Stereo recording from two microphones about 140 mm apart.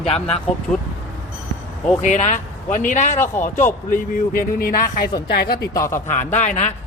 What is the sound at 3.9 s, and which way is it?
A man's voice, 85° left.